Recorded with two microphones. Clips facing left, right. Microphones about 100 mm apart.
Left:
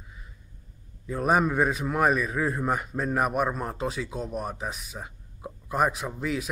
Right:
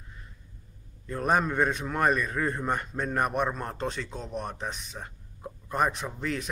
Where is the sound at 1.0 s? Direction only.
5° left (ahead or behind).